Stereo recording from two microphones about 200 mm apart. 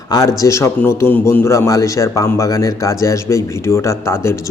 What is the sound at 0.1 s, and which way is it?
A man's voice, 15° left (ahead or behind).